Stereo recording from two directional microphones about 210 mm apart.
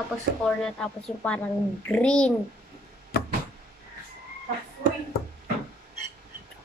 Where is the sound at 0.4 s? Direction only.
5° left (ahead or behind).